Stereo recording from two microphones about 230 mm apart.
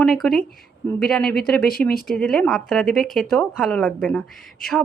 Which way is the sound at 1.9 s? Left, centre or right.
Left.